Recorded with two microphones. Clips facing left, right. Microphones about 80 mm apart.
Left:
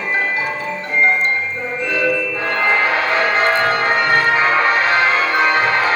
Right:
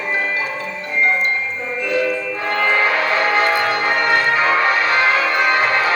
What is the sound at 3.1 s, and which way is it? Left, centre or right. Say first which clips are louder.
Change ringing: left 2 dB; left.